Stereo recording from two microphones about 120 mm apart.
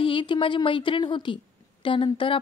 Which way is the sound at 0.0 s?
45° left (ahead or behind).